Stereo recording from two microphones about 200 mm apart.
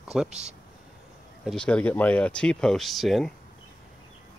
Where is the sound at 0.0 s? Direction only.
5° right (ahead or behind).